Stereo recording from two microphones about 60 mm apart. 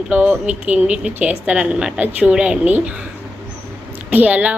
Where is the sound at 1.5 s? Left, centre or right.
Centre.